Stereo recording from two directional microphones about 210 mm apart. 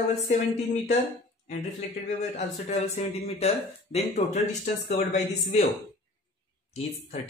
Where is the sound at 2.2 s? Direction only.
30° left (ahead or behind).